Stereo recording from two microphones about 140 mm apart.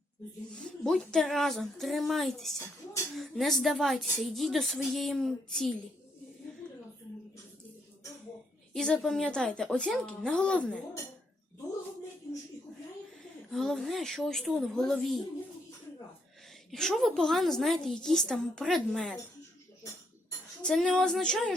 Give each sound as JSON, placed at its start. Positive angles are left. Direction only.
{"t": 0.9, "sound": "a woman's voice", "side_deg": 5}
{"t": 8.7, "sound": "a woman's voice", "side_deg": 5}
{"t": 13.5, "sound": "a woman's voice", "side_deg": 0}
{"t": 16.7, "sound": "a woman's voice", "side_deg": 5}
{"t": 20.6, "sound": "a woman's voice", "side_deg": 5}